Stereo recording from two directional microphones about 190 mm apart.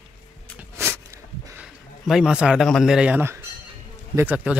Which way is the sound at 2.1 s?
5° right (ahead or behind).